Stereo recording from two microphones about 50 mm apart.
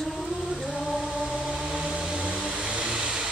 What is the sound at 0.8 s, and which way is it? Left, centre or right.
Chant, centre.